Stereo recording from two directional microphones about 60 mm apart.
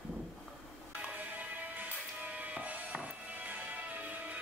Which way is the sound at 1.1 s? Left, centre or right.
Right.